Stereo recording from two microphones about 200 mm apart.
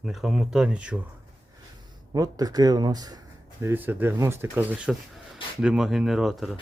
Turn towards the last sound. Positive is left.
turn(degrees=0)  # may be behind; listen again after turning